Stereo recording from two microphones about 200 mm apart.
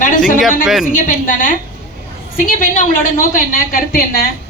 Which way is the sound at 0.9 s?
40° left (ahead or behind).